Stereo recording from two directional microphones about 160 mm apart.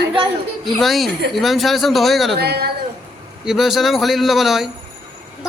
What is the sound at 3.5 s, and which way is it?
A man's voice, centre (ahead or behind).